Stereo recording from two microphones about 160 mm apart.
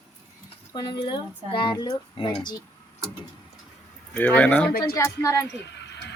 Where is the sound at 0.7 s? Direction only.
30° left (ahead or behind).